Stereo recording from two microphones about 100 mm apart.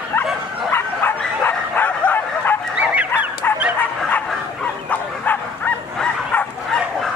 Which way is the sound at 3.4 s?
20° left (ahead or behind).